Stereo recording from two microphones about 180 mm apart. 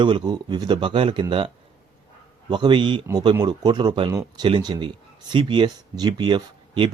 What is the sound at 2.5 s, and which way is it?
Speech, 25° right (ahead or behind).